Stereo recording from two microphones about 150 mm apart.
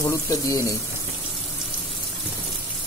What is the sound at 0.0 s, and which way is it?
Speech, 20° left (ahead or behind).